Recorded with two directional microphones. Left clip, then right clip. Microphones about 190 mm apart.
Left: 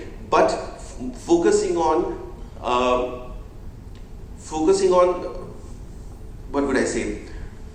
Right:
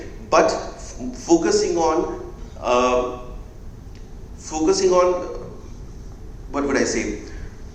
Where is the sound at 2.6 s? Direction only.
30° right (ahead or behind).